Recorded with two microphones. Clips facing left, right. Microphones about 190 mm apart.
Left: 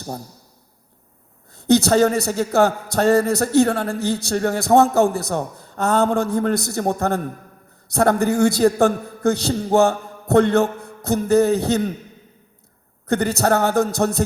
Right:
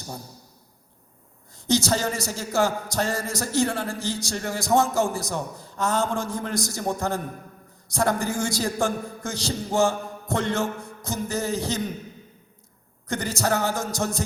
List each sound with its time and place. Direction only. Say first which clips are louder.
1.5 s a man's voice: left 9 dB; 60° left (ahead or behind)
13.1 s a man's voice: left 7 dB; 60° left (ahead or behind)